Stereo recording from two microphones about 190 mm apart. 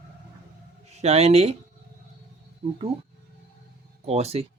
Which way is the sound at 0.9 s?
35° right (ahead or behind).